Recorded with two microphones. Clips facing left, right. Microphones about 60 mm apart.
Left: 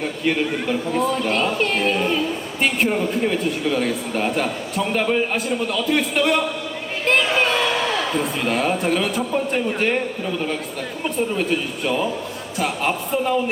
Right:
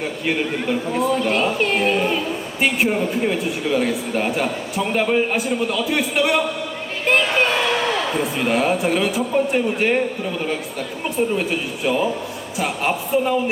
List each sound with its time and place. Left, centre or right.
0.0 s a man's voice: centre
7.0 s a sound: centre
8.2 s a man's voice: centre
11.0 s a man's voice: centre